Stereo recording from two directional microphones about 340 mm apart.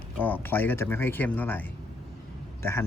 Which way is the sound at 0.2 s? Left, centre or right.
Centre.